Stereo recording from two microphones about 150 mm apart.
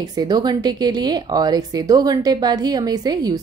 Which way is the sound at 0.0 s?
25° right (ahead or behind).